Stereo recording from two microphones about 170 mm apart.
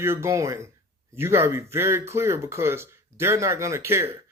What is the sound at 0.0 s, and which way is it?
Speech, 15° right (ahead or behind).